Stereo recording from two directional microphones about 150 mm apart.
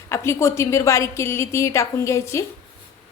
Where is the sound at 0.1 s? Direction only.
20° left (ahead or behind).